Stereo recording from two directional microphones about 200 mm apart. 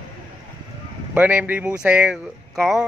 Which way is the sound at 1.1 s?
10° right (ahead or behind).